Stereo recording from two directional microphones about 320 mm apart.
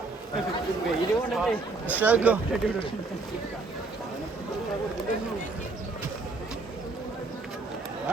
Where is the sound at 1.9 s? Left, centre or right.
Centre.